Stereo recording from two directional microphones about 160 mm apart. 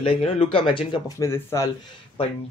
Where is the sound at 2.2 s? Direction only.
35° left (ahead or behind).